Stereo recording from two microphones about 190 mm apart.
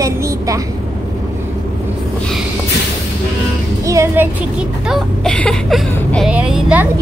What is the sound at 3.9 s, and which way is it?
Speech, 15° right (ahead or behind).